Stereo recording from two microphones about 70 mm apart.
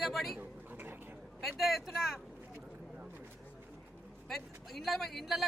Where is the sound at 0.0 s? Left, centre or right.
Centre.